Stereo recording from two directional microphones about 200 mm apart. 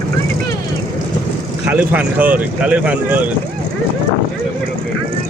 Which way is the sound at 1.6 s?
5° right (ahead or behind).